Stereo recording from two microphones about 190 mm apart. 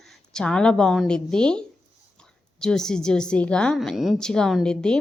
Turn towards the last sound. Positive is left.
turn(degrees=5)  # may be behind; listen again after turning